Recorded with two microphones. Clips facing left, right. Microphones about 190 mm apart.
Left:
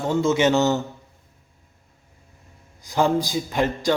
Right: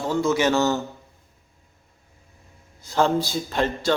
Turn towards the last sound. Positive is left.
turn(degrees=15)  # may be behind; listen again after turning